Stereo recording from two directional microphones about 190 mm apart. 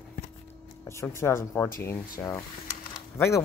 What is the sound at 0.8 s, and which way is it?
Speech, 15° left (ahead or behind).